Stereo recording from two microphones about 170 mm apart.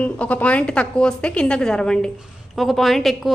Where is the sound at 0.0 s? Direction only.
10° left (ahead or behind).